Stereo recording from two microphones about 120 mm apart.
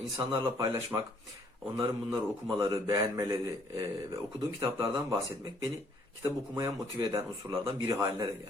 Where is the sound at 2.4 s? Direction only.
25° right (ahead or behind).